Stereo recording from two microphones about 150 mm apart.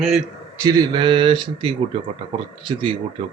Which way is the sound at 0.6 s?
25° right (ahead or behind).